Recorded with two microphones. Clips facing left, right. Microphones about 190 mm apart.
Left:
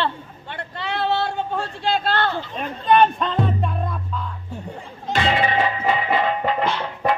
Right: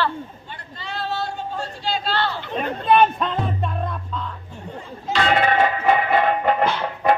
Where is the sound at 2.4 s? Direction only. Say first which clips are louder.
Right 4 dB; 60° right (ahead or behind).